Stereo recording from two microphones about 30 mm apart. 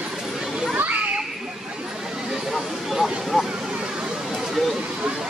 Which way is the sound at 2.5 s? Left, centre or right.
Centre.